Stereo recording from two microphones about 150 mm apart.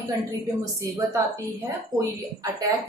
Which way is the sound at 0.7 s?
20° right (ahead or behind).